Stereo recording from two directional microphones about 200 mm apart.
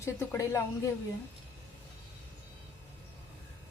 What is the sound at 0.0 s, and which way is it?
Speech, 15° left (ahead or behind).